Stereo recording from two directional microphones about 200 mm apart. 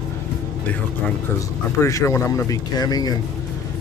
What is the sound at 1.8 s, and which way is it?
Speech, 15° left (ahead or behind).